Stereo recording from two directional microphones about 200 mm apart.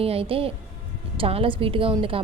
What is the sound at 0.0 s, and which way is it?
A woman's voice, 30° right (ahead or behind).